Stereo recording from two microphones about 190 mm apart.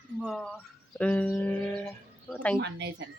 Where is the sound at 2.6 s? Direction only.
65° right (ahead or behind).